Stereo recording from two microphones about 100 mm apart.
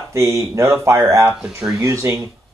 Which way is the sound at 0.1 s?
30° right (ahead or behind).